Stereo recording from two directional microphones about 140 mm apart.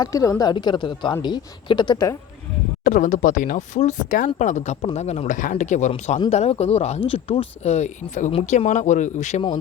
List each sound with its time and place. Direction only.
0.0 s a woman's voice: 25° left (ahead or behind)
2.8 s speech: 65° left (ahead or behind)
5.9 s a woman's voice: 35° left (ahead or behind)
6.3 s speech: 50° left (ahead or behind)